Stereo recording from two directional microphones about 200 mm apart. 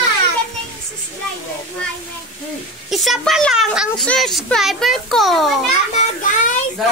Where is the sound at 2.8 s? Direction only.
Centre (ahead or behind).